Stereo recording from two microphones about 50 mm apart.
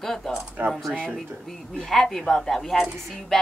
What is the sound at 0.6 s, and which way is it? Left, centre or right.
Speech, right.